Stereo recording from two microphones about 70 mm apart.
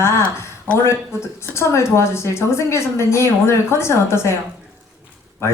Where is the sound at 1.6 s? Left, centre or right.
Left.